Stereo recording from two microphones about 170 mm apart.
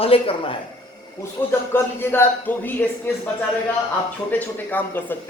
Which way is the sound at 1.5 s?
15° left (ahead or behind).